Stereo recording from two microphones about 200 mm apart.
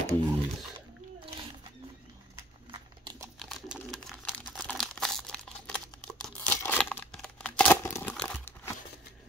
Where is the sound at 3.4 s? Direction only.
Centre (ahead or behind).